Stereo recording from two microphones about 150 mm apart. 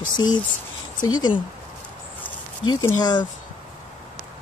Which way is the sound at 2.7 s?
25° left (ahead or behind).